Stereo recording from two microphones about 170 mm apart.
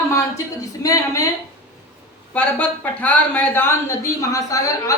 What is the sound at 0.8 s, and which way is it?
Speech, 20° left (ahead or behind).